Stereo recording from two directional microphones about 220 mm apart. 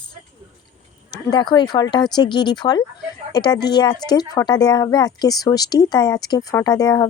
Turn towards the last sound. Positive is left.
turn(degrees=15)  # may be behind; listen again after turning